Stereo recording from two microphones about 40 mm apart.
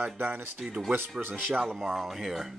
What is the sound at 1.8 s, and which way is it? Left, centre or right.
Speech, centre.